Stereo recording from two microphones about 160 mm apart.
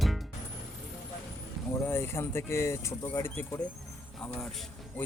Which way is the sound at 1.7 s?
15° left (ahead or behind).